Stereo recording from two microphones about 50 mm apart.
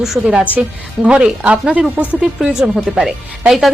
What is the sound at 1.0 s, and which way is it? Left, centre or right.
Speech, centre.